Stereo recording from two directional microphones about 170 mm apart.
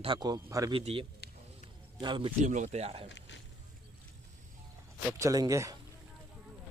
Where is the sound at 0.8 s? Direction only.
35° right (ahead or behind).